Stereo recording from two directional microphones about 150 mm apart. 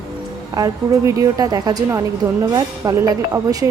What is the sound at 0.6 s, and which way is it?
Speech, 20° right (ahead or behind).